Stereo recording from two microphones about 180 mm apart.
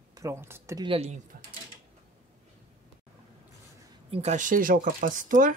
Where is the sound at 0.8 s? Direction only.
35° right (ahead or behind).